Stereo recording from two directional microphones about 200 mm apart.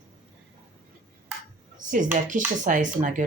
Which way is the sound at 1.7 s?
40° right (ahead or behind).